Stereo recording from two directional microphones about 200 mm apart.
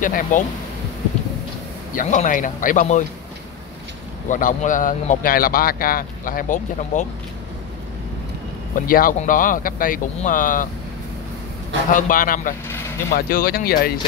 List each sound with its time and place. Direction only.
0.0 s speech: 40° left (ahead or behind)
2.0 s speech: 40° left (ahead or behind)
4.3 s speech: 40° left (ahead or behind)
8.7 s speech: 45° left (ahead or behind)
11.9 s speech: 45° left (ahead or behind)